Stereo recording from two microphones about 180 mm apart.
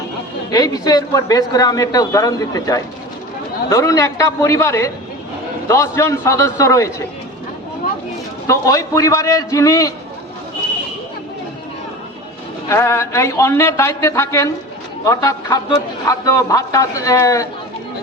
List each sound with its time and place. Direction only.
0.5 s a man's voice: 20° left (ahead or behind)
8.4 s a man's voice: 20° left (ahead or behind)
12.6 s a man's voice: 15° left (ahead or behind)